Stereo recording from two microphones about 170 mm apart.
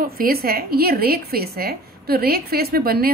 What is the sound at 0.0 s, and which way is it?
A woman's voice, 60° right (ahead or behind).